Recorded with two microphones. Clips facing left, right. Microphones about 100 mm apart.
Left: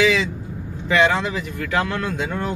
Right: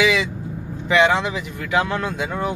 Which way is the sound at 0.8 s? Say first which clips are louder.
Right 1 dB; 15° right (ahead or behind).